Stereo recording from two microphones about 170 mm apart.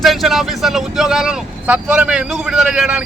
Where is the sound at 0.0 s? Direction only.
Centre (ahead or behind).